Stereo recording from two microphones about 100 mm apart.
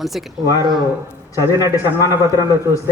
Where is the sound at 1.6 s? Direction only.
30° right (ahead or behind).